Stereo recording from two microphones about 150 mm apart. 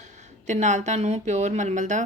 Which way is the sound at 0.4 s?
50° right (ahead or behind).